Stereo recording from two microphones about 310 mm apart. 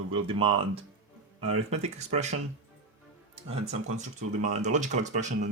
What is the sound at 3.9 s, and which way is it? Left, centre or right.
Speech, right.